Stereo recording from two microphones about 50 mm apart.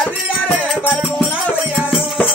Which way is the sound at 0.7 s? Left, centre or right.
Left.